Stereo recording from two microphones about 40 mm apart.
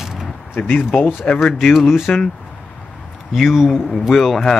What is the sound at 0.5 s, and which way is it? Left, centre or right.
Speech, left.